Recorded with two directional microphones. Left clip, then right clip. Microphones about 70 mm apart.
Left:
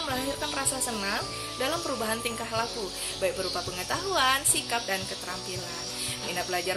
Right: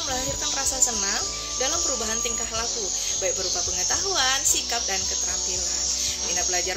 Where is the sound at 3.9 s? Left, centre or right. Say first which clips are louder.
Even; left.